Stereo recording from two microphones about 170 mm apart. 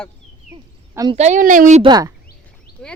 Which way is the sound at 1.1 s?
40° right (ahead or behind).